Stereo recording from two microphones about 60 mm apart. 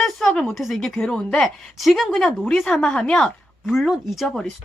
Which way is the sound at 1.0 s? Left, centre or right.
Centre.